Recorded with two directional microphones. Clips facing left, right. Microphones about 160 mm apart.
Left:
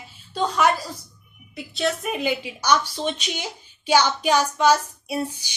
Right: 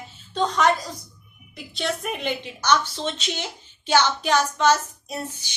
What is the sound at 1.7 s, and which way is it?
A woman's voice, centre (ahead or behind).